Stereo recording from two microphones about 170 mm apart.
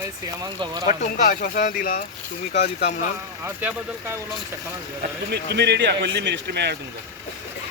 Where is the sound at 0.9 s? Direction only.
50° left (ahead or behind).